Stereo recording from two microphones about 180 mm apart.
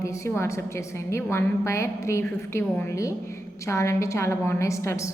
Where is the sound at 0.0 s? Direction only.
15° left (ahead or behind).